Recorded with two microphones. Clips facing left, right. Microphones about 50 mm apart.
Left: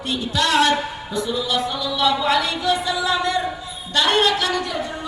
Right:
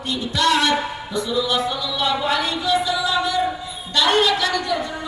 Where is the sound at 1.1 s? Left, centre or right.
Right.